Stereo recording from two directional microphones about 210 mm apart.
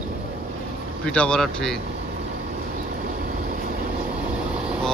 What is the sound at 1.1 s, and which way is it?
Speech, 5° left (ahead or behind).